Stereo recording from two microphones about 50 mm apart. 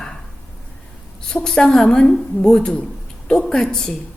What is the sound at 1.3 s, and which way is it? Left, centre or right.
A woman's voice, centre.